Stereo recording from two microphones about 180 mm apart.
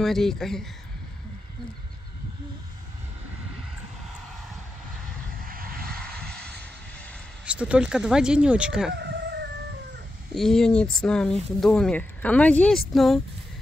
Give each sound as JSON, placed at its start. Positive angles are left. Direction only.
{"t": 0.0, "sound": "speech", "side_deg": 0}
{"t": 5.4, "sound": "vehicle", "side_deg": -55}
{"t": 7.4, "sound": "speech", "side_deg": -5}
{"t": 8.9, "sound": "chicken", "side_deg": -70}
{"t": 10.3, "sound": "speech", "side_deg": 0}